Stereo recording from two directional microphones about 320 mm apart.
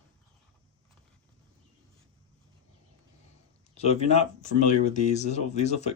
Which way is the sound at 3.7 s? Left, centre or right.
Centre.